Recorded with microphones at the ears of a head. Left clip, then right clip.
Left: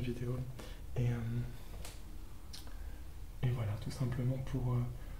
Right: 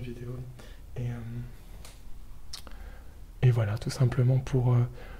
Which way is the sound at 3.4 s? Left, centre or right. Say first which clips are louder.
Right 12 dB; right.